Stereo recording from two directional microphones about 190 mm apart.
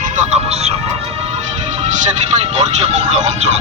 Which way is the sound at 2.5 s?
35° right (ahead or behind).